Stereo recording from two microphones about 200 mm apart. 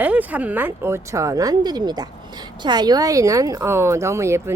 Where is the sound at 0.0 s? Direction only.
10° right (ahead or behind).